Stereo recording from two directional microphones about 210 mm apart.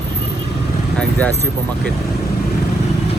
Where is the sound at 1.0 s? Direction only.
5° left (ahead or behind).